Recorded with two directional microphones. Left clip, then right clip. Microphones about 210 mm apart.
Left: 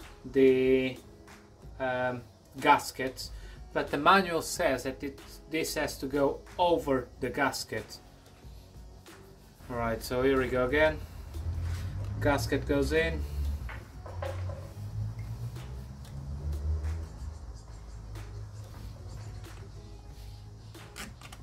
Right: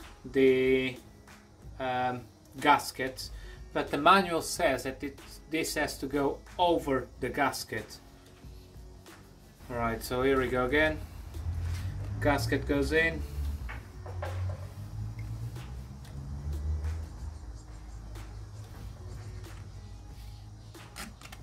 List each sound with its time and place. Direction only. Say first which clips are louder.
0.3 s speech: left 1 dB; centre (ahead or behind)
9.7 s speech: even; 5° left (ahead or behind)
12.2 s speech: even; centre (ahead or behind)